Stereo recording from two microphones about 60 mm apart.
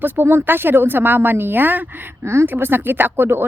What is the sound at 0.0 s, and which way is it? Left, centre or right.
A woman's voice, right.